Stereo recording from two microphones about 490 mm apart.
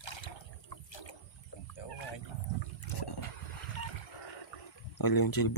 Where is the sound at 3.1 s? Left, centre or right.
Left.